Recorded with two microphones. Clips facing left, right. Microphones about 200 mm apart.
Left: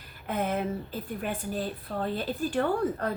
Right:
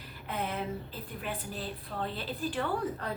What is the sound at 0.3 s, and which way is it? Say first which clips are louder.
A woman's voice: left 6 dB; 50° left (ahead or behind).